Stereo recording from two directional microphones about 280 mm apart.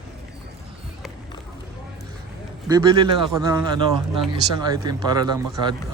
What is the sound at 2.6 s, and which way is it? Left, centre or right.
A man's voice, centre.